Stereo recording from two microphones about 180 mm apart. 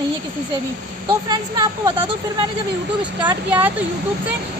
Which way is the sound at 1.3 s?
25° right (ahead or behind).